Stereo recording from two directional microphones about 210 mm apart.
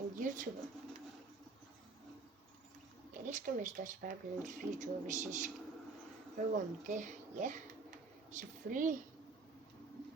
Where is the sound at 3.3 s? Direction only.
40° right (ahead or behind).